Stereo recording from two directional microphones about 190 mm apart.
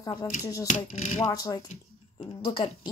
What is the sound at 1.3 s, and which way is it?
Speech, 20° left (ahead or behind).